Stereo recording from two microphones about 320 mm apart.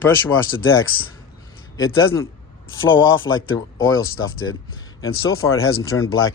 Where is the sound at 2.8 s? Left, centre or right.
Left.